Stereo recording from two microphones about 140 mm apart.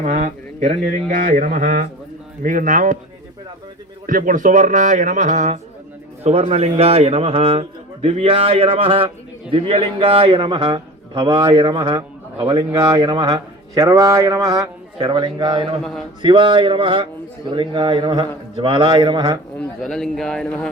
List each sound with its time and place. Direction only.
0.0 s speech: 60° right (ahead or behind)
1.0 s speech: 70° right (ahead or behind)
4.0 s speech: 75° right (ahead or behind)
6.2 s a man's voice: 45° right (ahead or behind)
15.8 s a man's voice: centre (ahead or behind)
16.2 s a man's voice: 35° right (ahead or behind)
19.5 s a man's voice: 5° left (ahead or behind)